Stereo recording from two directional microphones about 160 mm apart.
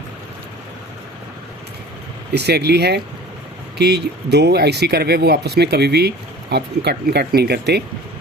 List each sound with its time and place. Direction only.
2.3 s speech: 90° right